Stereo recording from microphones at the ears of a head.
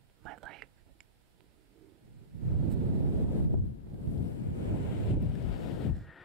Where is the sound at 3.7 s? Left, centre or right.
Left.